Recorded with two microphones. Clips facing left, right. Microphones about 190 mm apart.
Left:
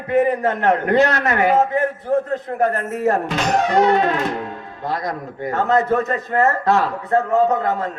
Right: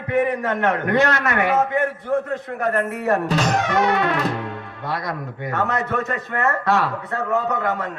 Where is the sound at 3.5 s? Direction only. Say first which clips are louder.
Left 8 dB; 30° left (ahead or behind).